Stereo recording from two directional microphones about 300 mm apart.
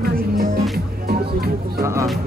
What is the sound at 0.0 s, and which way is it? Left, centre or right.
Music, right.